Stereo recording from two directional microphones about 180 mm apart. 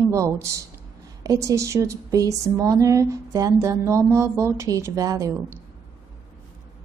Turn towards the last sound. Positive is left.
turn(degrees=-20)  # may be behind; listen again after turning